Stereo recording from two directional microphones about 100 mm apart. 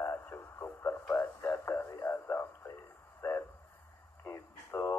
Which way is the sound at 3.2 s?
25° left (ahead or behind).